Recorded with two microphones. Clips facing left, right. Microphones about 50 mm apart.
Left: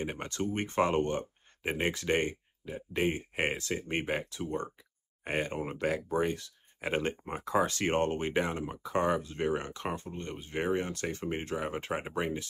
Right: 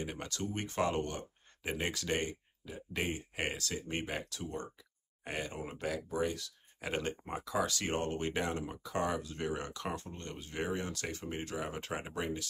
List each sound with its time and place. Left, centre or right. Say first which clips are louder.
0.0 s speech: left 5 dB; left
8.3 s speech: left 4 dB; centre